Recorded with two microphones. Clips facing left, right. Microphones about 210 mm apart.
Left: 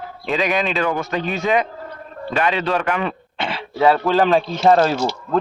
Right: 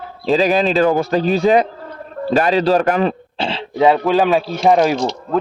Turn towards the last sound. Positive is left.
turn(degrees=5)  # may be behind; listen again after turning